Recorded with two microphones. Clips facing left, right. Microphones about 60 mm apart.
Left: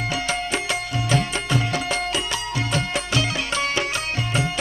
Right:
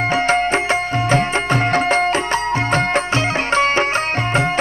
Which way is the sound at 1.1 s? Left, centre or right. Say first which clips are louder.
Right 5 dB; right.